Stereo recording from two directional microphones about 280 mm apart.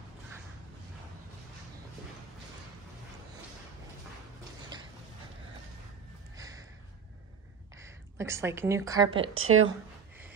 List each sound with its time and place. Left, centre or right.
6.3 s a sound: centre
7.7 s a woman's voice: centre
9.3 s a woman's voice: right